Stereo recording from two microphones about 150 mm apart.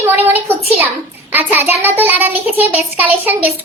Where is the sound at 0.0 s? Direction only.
15° right (ahead or behind).